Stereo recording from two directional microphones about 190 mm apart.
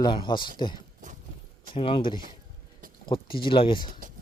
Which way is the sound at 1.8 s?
30° left (ahead or behind).